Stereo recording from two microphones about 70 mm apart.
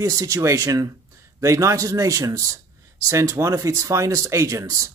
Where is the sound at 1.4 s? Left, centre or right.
Right.